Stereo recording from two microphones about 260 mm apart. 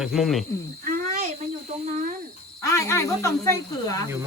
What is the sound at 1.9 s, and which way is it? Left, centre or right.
Speech, right.